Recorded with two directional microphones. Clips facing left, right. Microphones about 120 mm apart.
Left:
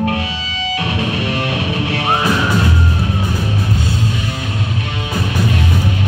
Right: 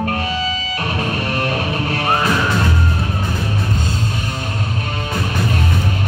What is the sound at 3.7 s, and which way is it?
Music, 45° right (ahead or behind).